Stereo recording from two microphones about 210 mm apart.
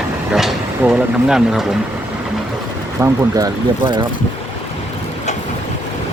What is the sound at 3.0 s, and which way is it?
Speech, 15° right (ahead or behind).